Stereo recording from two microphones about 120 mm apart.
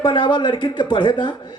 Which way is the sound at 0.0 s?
40° left (ahead or behind).